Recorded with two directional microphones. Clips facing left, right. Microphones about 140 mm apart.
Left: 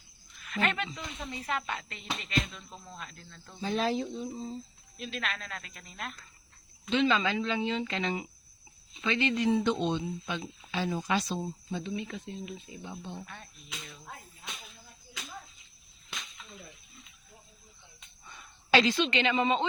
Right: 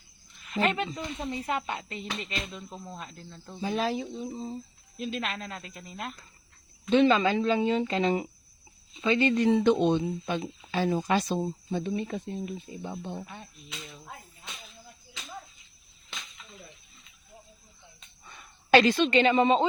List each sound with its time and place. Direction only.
0.5 s speech: 30° right (ahead or behind)
3.8 s speech: centre (ahead or behind)
4.1 s speech: 20° right (ahead or behind)
4.9 s speech: 30° right (ahead or behind)
6.9 s speech: 50° right (ahead or behind); by 9.3 s 30° right (ahead or behind)
9.5 s speech: 60° right (ahead or behind)
13.2 s speech: 15° right (ahead or behind)
18.7 s speech: 50° right (ahead or behind)